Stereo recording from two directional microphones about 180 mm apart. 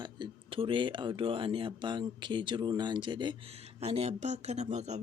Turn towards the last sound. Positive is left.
turn(degrees=-40)  # may be behind; listen again after turning